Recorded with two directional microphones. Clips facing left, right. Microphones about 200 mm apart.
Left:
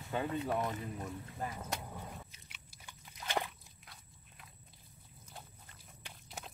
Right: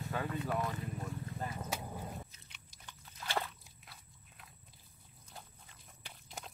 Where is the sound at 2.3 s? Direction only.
10° left (ahead or behind).